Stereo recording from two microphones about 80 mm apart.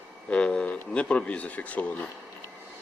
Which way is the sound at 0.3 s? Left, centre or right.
Centre.